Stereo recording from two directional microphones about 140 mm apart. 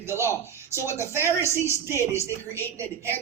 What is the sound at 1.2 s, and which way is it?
Speech, 20° right (ahead or behind).